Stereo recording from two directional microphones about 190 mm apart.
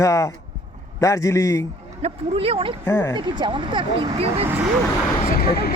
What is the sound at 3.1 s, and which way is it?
Speech, 25° right (ahead or behind).